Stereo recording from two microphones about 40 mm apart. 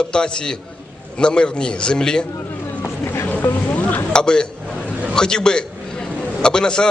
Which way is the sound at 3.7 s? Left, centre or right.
Left.